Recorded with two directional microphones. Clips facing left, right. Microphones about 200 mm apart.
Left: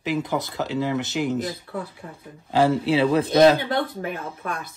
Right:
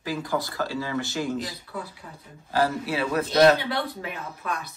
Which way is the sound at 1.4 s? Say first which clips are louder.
Left 5 dB; 50° left (ahead or behind).